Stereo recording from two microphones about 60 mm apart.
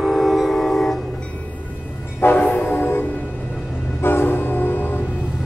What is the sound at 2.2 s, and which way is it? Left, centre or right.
Train horn, left.